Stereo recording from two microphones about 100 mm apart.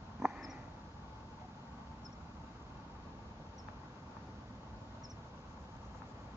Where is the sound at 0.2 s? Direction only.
25° right (ahead or behind).